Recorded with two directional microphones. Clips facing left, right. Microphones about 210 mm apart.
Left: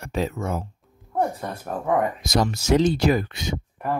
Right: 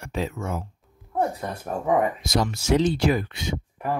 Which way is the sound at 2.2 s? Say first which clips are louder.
Left 2 dB; 40° left (ahead or behind).